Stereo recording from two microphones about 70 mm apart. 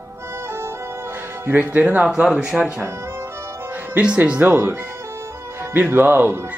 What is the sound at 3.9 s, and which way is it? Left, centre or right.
Music, centre.